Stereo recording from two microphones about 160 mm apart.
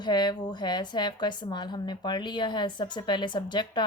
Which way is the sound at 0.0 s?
25° left (ahead or behind).